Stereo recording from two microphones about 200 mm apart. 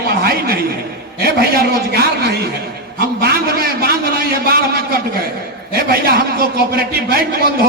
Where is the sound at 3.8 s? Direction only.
50° right (ahead or behind).